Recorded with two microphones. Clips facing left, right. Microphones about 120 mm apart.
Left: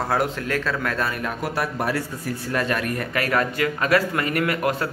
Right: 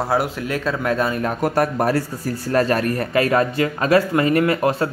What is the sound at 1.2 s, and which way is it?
A man's voice, 45° right (ahead or behind).